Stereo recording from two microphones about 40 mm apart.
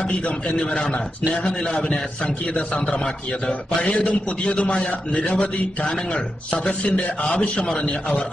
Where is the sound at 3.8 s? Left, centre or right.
Left.